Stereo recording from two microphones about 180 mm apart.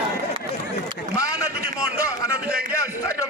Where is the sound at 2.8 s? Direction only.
15° left (ahead or behind).